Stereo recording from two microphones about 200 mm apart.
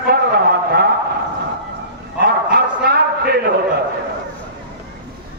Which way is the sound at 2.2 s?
50° right (ahead or behind).